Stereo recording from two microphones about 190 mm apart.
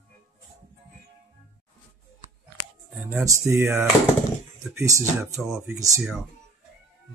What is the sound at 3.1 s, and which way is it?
Mantra, 10° right (ahead or behind).